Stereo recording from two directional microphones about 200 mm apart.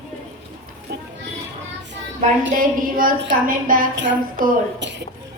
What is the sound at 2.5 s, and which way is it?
A woman's voice, 45° right (ahead or behind).